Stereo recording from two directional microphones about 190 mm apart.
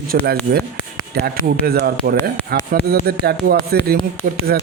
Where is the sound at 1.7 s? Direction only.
55° right (ahead or behind).